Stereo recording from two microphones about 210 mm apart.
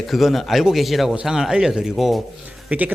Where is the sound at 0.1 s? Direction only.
Centre (ahead or behind).